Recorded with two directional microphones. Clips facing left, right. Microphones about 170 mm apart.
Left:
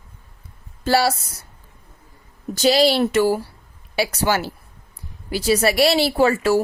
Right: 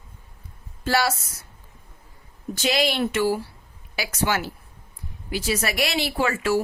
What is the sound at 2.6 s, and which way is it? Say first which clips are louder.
A woman's voice: left 7 dB; 35° left (ahead or behind).